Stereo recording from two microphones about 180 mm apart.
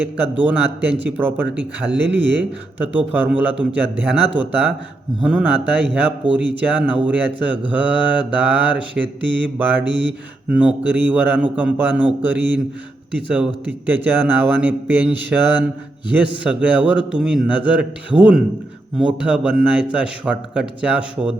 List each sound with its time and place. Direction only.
0.3 s mantra: 10° right (ahead or behind)
1.9 s speech: 90° right
2.9 s mantra: 10° right (ahead or behind)
5.2 s speech: 5° right (ahead or behind)
5.7 s mantra: 10° right (ahead or behind)
16.1 s speech: 5° right (ahead or behind)